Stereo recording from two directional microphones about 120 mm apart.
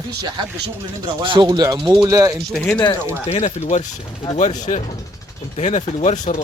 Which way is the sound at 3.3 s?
65° left (ahead or behind).